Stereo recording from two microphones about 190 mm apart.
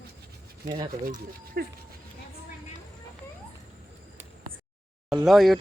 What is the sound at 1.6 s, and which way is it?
Speech, 50° right (ahead or behind).